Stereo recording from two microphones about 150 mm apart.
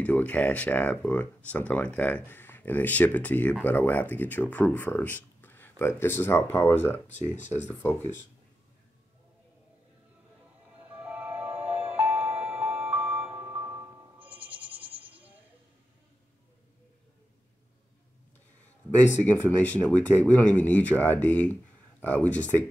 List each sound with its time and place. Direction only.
0.0 s speech: 10° left (ahead or behind)
7.1 s speech: 50° left (ahead or behind)
7.5 s speech: 15° left (ahead or behind)
10.9 s music: 10° right (ahead or behind)
19.2 s speech: 10° left (ahead or behind)